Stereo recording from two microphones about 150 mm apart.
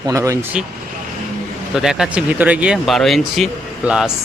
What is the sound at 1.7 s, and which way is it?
Speech, centre (ahead or behind).